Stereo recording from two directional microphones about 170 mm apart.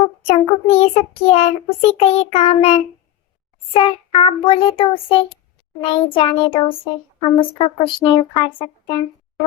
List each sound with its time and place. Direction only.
0.3 s child singing: 40° left (ahead or behind)
7.2 s speech: 30° left (ahead or behind)